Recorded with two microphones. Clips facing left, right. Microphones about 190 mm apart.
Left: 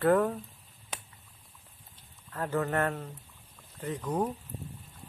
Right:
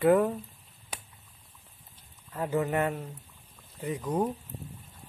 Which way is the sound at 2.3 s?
10° right (ahead or behind).